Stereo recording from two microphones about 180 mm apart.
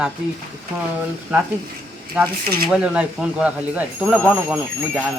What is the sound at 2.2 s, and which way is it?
Speech, 5° right (ahead or behind).